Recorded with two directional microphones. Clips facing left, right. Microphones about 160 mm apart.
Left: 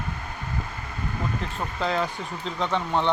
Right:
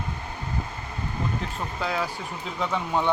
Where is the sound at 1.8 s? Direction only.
5° right (ahead or behind).